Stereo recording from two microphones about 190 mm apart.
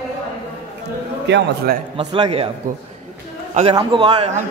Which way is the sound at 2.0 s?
25° right (ahead or behind).